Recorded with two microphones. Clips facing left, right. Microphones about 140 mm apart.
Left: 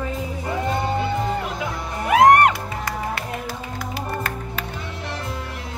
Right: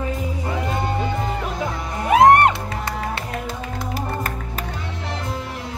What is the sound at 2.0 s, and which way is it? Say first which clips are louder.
Music: right 1 dB; 25° right (ahead or behind).